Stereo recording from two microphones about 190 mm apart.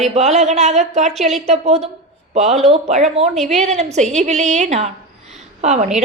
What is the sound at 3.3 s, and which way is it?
Speech, centre (ahead or behind).